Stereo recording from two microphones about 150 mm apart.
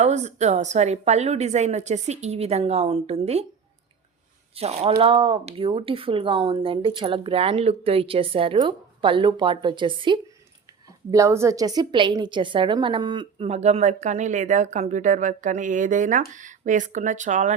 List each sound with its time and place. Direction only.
0.0 s a woman's voice: 50° right (ahead or behind)
4.5 s speech: 40° right (ahead or behind)
11.1 s speech: 20° right (ahead or behind)
13.4 s speech: 45° right (ahead or behind)